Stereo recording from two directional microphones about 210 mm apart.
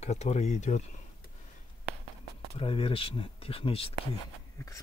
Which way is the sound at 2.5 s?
25° left (ahead or behind).